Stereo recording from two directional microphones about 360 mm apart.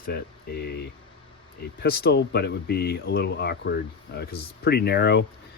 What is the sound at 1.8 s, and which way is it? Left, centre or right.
Speech, left.